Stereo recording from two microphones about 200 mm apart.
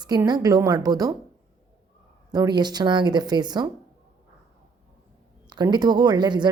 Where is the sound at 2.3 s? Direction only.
20° right (ahead or behind).